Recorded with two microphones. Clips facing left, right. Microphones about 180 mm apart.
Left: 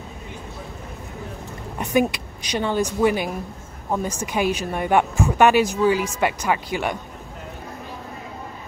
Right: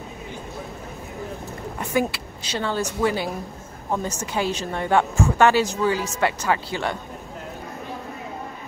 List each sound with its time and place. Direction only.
1.8 s a woman's voice: 20° left (ahead or behind)